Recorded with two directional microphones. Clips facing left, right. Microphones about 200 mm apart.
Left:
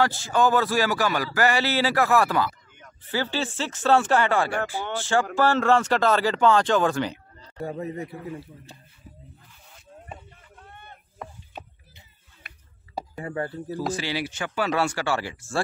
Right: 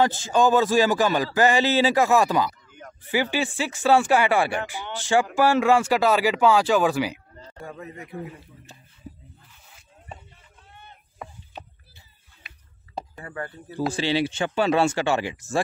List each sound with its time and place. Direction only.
0.0 s speech: 20° right (ahead or behind)
7.6 s a man's voice: 35° left (ahead or behind)
10.7 s a sound: 55° left (ahead or behind)
11.2 s chopping: 5° right (ahead or behind)
12.4 s a sound: 55° left (ahead or behind)
13.1 s speech: 25° left (ahead or behind)
13.7 s speech: 25° right (ahead or behind)